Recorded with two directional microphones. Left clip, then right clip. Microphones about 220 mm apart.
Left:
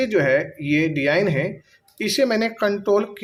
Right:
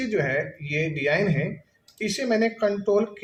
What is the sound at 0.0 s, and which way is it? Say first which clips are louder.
Speech: left 6 dB; 45° left (ahead or behind).